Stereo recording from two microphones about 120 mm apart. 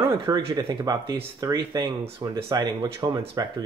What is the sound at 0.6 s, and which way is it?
Speech, 35° right (ahead or behind).